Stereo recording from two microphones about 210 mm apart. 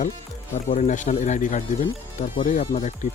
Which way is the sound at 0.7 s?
35° left (ahead or behind).